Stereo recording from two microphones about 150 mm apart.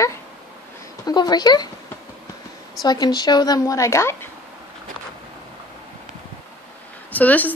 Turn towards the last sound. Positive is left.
turn(degrees=10)  # may be behind; listen again after turning